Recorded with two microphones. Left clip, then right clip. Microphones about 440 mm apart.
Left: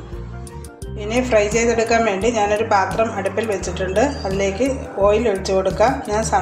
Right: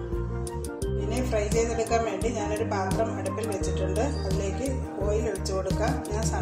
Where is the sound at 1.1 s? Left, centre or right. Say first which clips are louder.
Left 14 dB; left.